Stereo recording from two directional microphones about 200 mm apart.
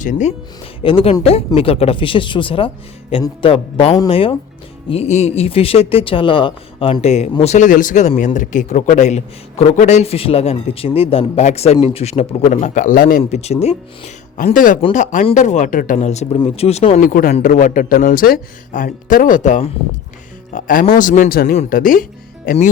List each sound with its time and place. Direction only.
0.0 s speech: 40° left (ahead or behind)
0.8 s speech: 25° left (ahead or behind)
17.0 s speech: 45° left (ahead or behind)